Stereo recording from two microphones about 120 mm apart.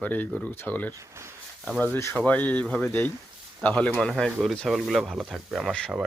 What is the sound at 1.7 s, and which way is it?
Speech, 15° left (ahead or behind).